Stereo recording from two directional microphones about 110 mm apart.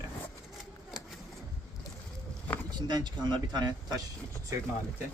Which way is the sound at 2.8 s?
40° right (ahead or behind).